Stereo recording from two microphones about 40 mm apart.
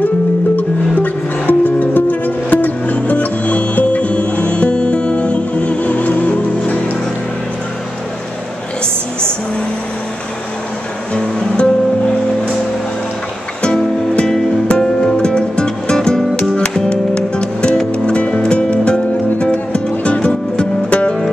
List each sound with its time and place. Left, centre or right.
0.6 s music: left
11.1 s music: left
14.7 s music: centre